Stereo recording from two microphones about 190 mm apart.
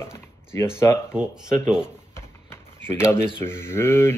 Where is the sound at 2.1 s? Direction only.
15° left (ahead or behind).